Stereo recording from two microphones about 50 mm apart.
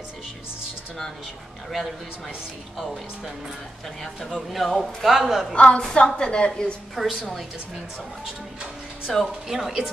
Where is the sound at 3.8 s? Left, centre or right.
Centre.